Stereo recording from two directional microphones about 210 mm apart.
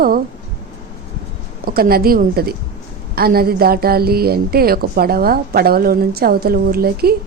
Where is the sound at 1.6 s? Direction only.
45° right (ahead or behind).